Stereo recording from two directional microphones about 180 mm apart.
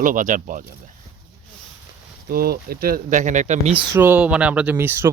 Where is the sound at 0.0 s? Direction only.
50° right (ahead or behind).